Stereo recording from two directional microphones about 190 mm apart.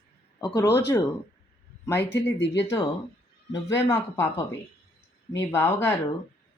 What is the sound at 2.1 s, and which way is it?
Speech, 65° left (ahead or behind).